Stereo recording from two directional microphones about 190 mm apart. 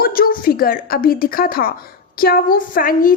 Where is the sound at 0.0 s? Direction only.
50° left (ahead or behind).